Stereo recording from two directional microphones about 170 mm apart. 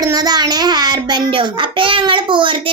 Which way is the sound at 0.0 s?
25° right (ahead or behind).